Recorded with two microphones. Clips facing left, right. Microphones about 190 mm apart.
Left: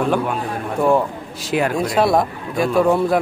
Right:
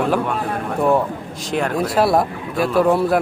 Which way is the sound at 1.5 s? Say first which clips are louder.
Left 1 dB; centre (ahead or behind).